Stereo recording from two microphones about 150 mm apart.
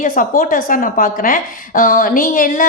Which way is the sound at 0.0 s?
65° left (ahead or behind).